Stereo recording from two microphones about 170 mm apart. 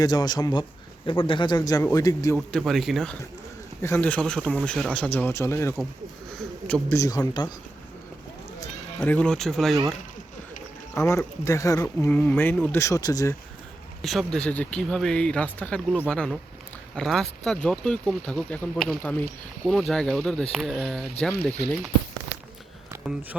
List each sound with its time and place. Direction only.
0.0 s speech: 25° left (ahead or behind)
2.5 s speech: centre (ahead or behind)
3.8 s speech: 15° left (ahead or behind)
6.9 s speech: 20° left (ahead or behind)
9.0 s speech: 5° left (ahead or behind)
10.9 s speech: 15° left (ahead or behind)
14.0 s speech: centre (ahead or behind)